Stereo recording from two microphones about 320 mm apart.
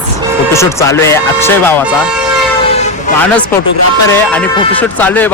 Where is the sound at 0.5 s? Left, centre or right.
Centre.